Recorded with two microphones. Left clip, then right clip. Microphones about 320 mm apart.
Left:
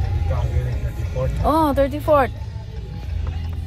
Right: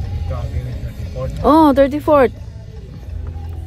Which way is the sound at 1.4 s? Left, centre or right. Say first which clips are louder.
Right 7 dB; right.